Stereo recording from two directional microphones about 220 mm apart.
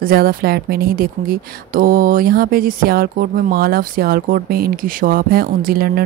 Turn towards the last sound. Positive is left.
turn(degrees=-45)  # may be behind; listen again after turning